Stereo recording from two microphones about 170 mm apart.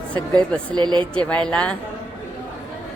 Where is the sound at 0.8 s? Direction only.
25° right (ahead or behind).